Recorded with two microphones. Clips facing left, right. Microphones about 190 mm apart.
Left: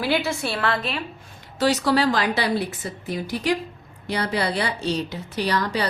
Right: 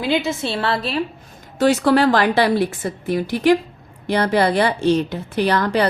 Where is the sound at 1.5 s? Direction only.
50° right (ahead or behind).